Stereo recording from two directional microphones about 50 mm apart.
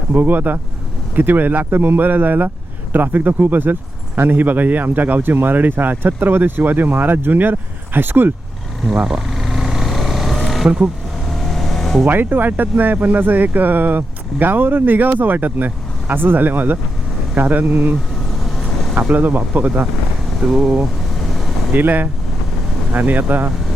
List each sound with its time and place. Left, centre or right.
0.1 s speech: right
9.0 s vehicle: centre
12.0 s speech: right
19.1 s speech: right
20.5 s speech: centre
21.7 s speech: right